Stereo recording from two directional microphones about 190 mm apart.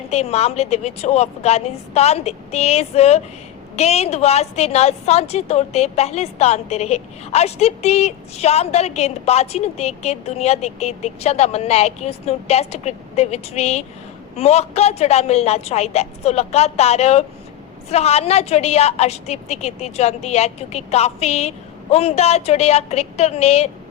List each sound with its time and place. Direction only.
0.1 s a woman's voice: 35° left (ahead or behind)